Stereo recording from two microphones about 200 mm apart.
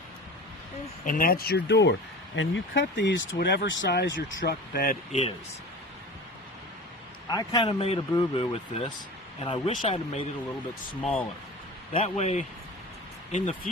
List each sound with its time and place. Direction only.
1.0 s speech: 40° left (ahead or behind); by 4.5 s 65° left (ahead or behind)
4.7 s speech: 45° left (ahead or behind)
7.3 s speech: 20° left (ahead or behind)
11.0 s speech: 5° left (ahead or behind)
11.9 s a man's voice: 35° left (ahead or behind)